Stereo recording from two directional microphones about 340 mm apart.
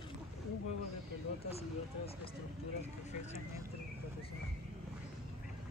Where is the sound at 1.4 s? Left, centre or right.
Centre.